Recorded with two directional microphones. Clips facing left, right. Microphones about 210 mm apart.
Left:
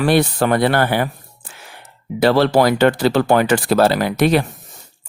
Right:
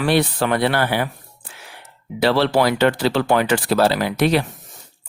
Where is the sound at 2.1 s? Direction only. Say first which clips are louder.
Left 3 dB; 45° left (ahead or behind).